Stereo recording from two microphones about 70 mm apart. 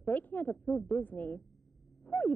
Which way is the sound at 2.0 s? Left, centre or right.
Left.